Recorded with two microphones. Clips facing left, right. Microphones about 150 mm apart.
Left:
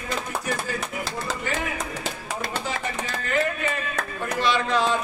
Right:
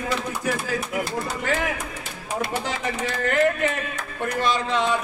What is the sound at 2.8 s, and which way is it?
Speech, 80° right.